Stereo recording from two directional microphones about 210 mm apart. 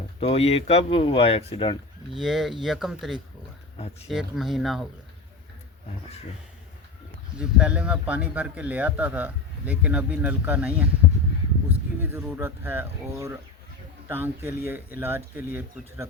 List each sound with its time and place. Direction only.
0.2 s speech: 30° left (ahead or behind)
2.1 s speech: centre (ahead or behind)
7.3 s a man's voice: 5° right (ahead or behind)